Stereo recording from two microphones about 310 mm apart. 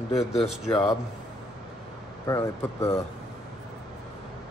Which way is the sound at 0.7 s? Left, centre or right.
Centre.